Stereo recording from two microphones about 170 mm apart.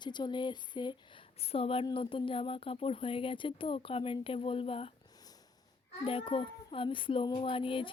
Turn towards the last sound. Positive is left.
turn(degrees=30)  # may be behind; listen again after turning